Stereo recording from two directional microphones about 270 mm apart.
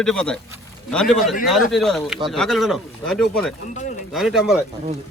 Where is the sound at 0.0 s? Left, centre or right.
Centre.